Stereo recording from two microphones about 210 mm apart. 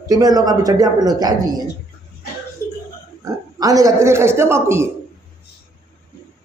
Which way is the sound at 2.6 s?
15° left (ahead or behind).